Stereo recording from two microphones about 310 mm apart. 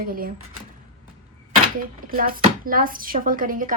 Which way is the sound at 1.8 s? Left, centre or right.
Right.